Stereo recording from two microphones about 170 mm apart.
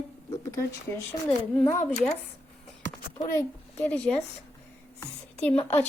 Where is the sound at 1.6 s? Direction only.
20° left (ahead or behind).